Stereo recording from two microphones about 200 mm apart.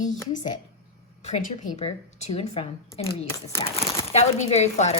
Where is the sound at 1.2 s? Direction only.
40° left (ahead or behind).